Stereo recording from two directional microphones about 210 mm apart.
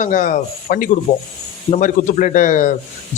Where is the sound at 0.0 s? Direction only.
35° left (ahead or behind).